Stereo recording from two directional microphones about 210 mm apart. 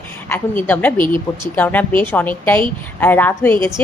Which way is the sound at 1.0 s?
20° right (ahead or behind).